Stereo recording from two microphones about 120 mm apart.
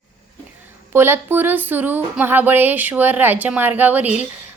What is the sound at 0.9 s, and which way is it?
Speech, 20° right (ahead or behind).